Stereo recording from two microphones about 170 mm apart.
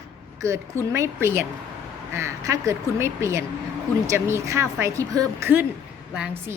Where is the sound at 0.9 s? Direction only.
15° right (ahead or behind).